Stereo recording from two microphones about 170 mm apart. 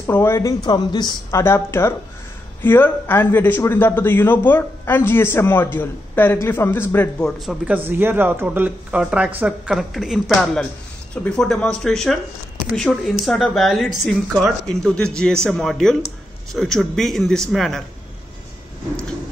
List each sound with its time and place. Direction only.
0.0 s a man's voice: 15° left (ahead or behind)